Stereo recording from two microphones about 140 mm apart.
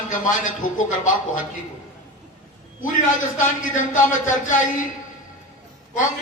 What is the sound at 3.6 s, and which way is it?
Speech, 65° left (ahead or behind).